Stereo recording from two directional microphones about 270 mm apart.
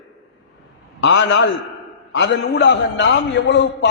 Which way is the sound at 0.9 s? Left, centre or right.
Left.